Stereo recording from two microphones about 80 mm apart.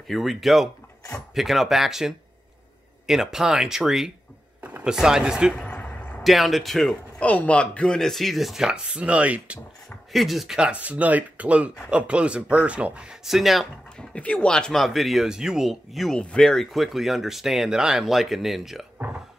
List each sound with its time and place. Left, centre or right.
0.1 s speech: centre
4.6 s chopping: right
4.8 s speech: centre
5.6 s a sound: centre
6.2 s speech: centre
7.2 s speech: centre
10.1 s speech: centre
13.9 s speech: centre
16.2 s speech: centre
18.9 s a sound: centre